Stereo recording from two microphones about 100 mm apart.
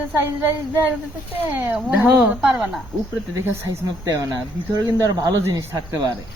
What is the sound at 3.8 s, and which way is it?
Speech, 35° right (ahead or behind).